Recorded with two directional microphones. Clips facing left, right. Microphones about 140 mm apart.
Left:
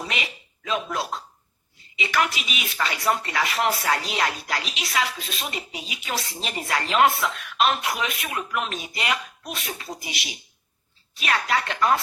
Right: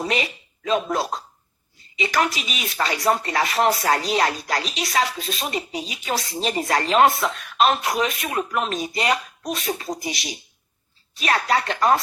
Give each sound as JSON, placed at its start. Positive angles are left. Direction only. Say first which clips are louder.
{"t": 0.0, "sound": "speech", "louder": "right 7 dB", "side_deg": -40}